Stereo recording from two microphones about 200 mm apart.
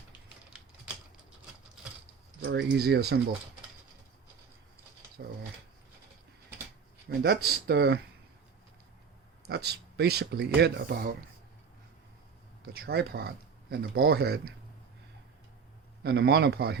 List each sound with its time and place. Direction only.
2.4 s speech: 55° right (ahead or behind)
5.2 s dog: 50° right (ahead or behind)
7.1 s speech: 50° right (ahead or behind)
9.5 s speech: 55° right (ahead or behind)
12.6 s speech: 50° right (ahead or behind)
16.0 s speech: 55° right (ahead or behind)